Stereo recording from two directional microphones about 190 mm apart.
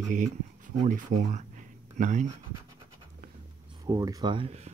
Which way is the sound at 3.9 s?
20° right (ahead or behind).